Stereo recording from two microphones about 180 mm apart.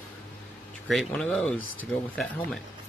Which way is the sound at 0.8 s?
Centre (ahead or behind).